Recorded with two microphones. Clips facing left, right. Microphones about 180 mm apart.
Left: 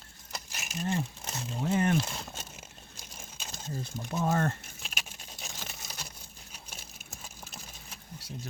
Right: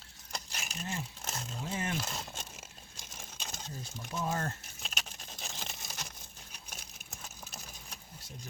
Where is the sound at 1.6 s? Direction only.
55° left (ahead or behind).